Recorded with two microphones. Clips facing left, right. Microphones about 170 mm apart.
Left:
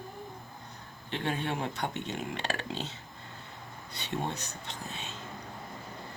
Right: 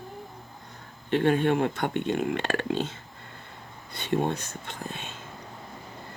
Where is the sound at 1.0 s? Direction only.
55° right (ahead or behind).